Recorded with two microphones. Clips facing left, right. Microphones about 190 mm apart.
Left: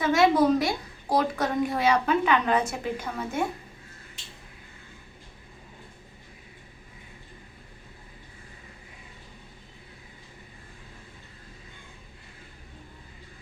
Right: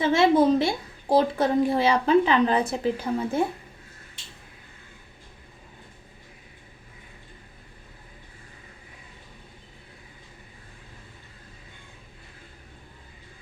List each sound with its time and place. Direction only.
0.0 s a child's voice: 30° right (ahead or behind)